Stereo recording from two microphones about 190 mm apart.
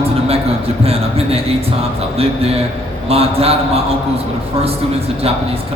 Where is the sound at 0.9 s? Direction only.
30° right (ahead or behind).